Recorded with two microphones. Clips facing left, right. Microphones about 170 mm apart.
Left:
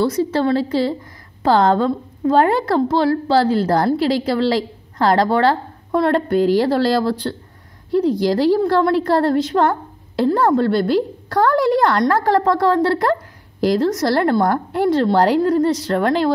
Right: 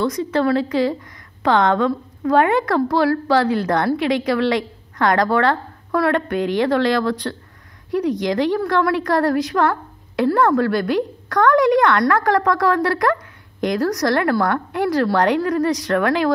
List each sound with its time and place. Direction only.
0.0 s a woman's voice: 30° left (ahead or behind)